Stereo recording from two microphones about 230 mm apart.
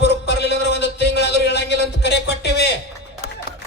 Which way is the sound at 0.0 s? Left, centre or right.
Left.